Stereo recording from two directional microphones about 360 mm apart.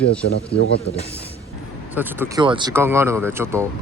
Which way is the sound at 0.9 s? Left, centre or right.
Left.